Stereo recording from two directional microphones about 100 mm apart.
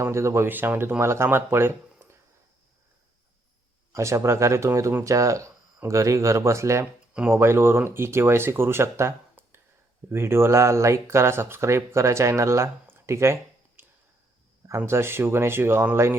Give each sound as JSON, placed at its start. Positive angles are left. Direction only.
{"t": 0.0, "sound": "speech", "side_deg": -30}
{"t": 3.9, "sound": "speech", "side_deg": -30}